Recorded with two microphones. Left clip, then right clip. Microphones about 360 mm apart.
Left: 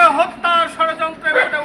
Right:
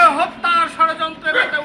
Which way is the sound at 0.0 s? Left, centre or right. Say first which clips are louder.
Left 1 dB; centre.